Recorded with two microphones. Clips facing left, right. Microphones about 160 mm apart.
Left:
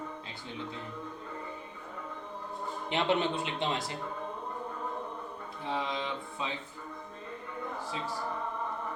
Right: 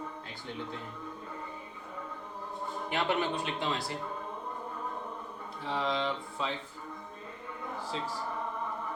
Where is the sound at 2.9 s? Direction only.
25° left (ahead or behind).